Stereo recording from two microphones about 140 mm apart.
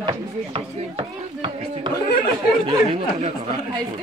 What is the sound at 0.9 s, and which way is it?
Speech, 35° right (ahead or behind).